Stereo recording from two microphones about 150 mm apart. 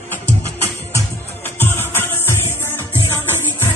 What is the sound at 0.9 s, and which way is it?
Music, 15° left (ahead or behind).